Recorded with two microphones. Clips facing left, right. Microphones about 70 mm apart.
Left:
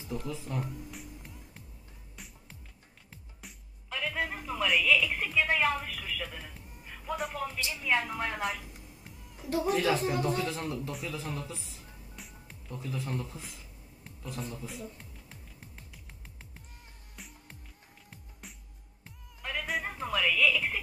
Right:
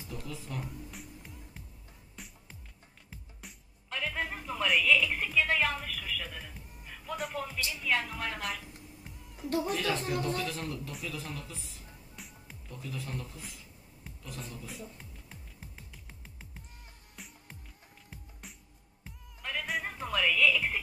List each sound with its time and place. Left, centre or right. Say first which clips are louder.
0.1 s a man's voice: left 5 dB; centre
0.6 s music: left 3 dB; centre
7.6 s speech: left 2 dB; centre
9.4 s speech: left 3 dB; centre
10.2 s a man's voice: left 3 dB; centre
12.2 s music: right 1 dB; centre
12.7 s a man's voice: left 4 dB; left
14.2 s a man's voice: left 5 dB; left
14.7 s music: left 2 dB; centre